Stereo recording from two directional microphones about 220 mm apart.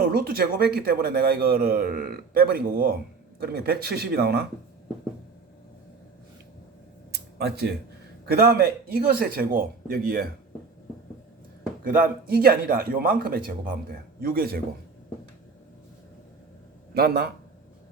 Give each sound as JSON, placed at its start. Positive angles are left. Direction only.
{"t": 0.0, "sound": "a man's voice", "side_deg": -45}
{"t": 7.1, "sound": "a sound", "side_deg": -50}
{"t": 8.3, "sound": "a man's voice", "side_deg": -45}
{"t": 11.8, "sound": "a man's voice", "side_deg": -40}
{"t": 16.9, "sound": "a man's voice", "side_deg": -45}